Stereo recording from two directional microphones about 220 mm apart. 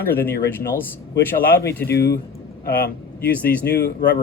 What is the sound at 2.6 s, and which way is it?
Speech, 45° left (ahead or behind).